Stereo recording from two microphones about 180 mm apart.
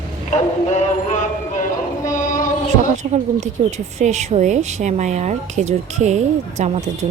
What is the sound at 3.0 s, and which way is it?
Speech, 40° right (ahead or behind).